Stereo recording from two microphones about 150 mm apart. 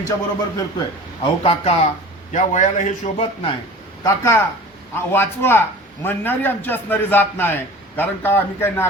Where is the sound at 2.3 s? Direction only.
55° left (ahead or behind).